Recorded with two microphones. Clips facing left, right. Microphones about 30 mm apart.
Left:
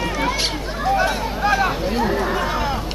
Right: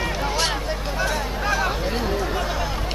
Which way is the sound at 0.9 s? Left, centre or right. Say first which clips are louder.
Left 5 dB; centre.